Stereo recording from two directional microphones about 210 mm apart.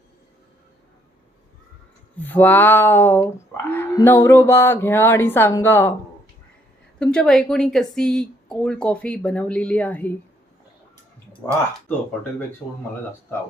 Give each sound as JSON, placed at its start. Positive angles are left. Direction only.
{"t": 2.1, "sound": "speech", "side_deg": 10}
{"t": 7.0, "sound": "a woman's voice", "side_deg": 5}
{"t": 11.4, "sound": "a woman's voice", "side_deg": 5}